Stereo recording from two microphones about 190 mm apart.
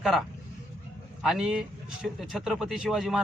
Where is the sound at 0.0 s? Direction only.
Centre (ahead or behind).